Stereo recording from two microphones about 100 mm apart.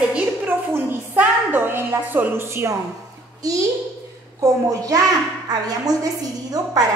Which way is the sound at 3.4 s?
35° right (ahead or behind).